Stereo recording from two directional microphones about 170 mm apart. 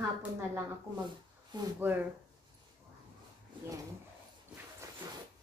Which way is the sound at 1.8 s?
10° right (ahead or behind).